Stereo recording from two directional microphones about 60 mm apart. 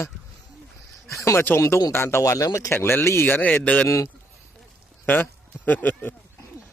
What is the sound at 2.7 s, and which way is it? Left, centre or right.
Speech, left.